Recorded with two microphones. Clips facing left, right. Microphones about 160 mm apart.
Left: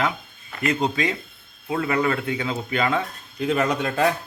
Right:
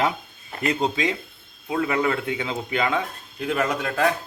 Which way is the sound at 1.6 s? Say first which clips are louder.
Even; 5° right (ahead or behind).